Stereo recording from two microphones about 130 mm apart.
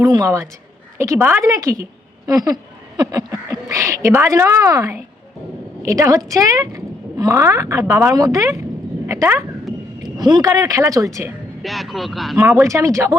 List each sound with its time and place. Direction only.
0.0 s a woman's voice: 25° right (ahead or behind)
1.2 s speech: 15° right (ahead or behind)
1.5 s a woman's voice: 25° right (ahead or behind)
10.0 s a woman's voice: 35° right (ahead or behind)
11.6 s speech: centre (ahead or behind)
12.4 s speech: 10° right (ahead or behind)
12.6 s a woman's voice: 25° right (ahead or behind)